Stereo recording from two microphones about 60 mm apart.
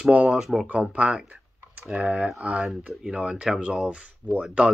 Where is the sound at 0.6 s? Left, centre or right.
Right.